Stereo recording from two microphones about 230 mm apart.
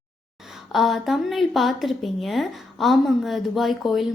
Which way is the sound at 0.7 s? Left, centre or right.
Centre.